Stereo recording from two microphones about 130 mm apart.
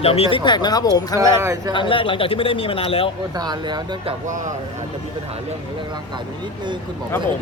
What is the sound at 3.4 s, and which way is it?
Speech, 35° right (ahead or behind).